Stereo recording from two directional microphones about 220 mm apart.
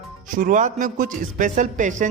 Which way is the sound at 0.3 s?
35° right (ahead or behind).